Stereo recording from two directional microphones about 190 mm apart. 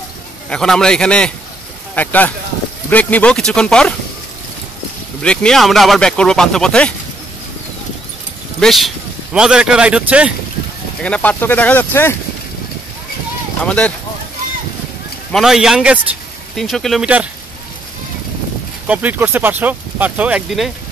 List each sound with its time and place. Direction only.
0.5 s speech: 5° left (ahead or behind)
5.2 s speech: 5° left (ahead or behind)
8.5 s speech: centre (ahead or behind)
11.0 s speech: 5° left (ahead or behind)
13.7 s speech: 5° left (ahead or behind)
15.3 s speech: centre (ahead or behind)
18.9 s speech: 10° right (ahead or behind)